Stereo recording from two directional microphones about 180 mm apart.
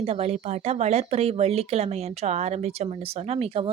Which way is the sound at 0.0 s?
35° right (ahead or behind).